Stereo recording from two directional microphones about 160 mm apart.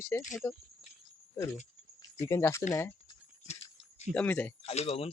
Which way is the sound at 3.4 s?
45° left (ahead or behind).